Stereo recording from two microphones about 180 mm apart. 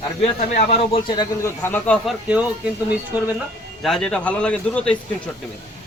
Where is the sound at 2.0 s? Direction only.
5° right (ahead or behind).